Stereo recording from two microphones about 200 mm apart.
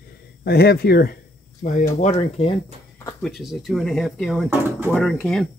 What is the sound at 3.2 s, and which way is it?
Speech, centre (ahead or behind).